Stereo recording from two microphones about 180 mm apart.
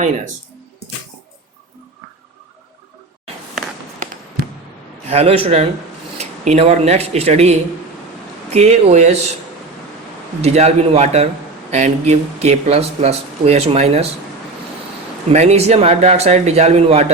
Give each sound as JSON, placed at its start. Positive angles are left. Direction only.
{"t": 5.0, "sound": "speech", "side_deg": -35}
{"t": 10.4, "sound": "speech", "side_deg": -35}
{"t": 15.3, "sound": "speech", "side_deg": -40}